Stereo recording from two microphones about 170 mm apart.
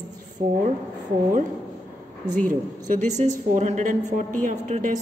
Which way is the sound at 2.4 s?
50° right (ahead or behind).